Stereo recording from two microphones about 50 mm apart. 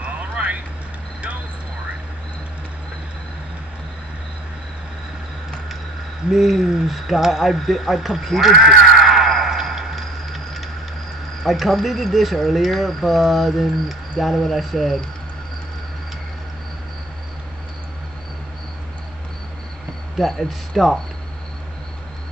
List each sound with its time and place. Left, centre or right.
0.0 s vehicle: right
6.3 s a sound: centre
11.4 s speech: centre
20.2 s speech: centre